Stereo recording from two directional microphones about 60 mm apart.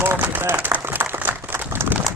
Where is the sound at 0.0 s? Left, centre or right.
Right.